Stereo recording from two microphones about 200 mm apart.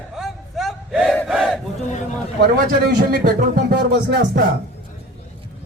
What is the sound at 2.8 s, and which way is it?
Speech, 50° right (ahead or behind).